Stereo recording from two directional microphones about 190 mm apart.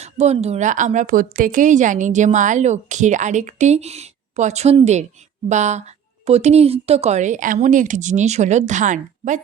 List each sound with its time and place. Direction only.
0.0 s a woman's voice: 35° right (ahead or behind)